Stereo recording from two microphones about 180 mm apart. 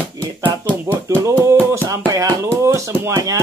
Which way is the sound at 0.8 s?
10° right (ahead or behind).